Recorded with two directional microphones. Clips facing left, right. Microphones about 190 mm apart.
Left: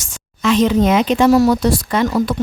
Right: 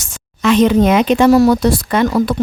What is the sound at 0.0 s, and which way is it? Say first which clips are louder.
Speech: right 3 dB; 60° right (ahead or behind).